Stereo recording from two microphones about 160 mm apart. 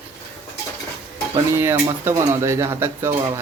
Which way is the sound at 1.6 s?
15° right (ahead or behind).